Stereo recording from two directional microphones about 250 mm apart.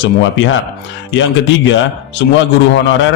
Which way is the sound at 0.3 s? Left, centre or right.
Left.